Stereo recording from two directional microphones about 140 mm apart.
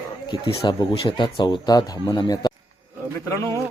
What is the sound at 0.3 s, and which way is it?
Speech, 35° left (ahead or behind).